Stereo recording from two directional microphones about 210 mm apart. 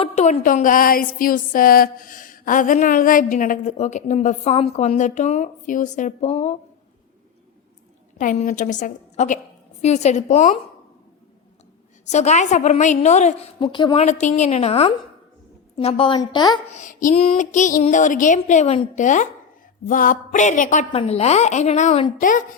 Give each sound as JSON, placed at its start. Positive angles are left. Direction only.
{"t": 0.0, "sound": "a woman's voice", "side_deg": 35}
{"t": 8.2, "sound": "a woman's voice", "side_deg": 40}
{"t": 12.0, "sound": "a woman's voice", "side_deg": 35}
{"t": 13.6, "sound": "a woman's voice", "side_deg": 20}
{"t": 14.0, "sound": "a woman's voice", "side_deg": 35}
{"t": 16.6, "sound": "a woman's voice", "side_deg": 35}